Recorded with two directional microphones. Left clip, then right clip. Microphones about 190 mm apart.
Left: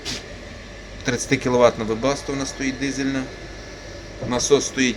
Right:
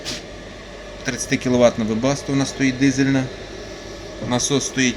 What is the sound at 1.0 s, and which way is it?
A man's voice, 15° right (ahead or behind).